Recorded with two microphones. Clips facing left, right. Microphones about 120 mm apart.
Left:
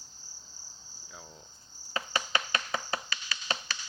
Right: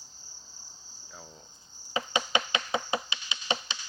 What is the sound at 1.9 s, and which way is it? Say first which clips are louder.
Insect: right 3 dB; 20° right (ahead or behind).